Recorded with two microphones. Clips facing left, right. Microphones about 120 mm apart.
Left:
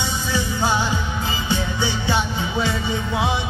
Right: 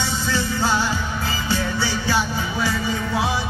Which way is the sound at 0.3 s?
15° left (ahead or behind).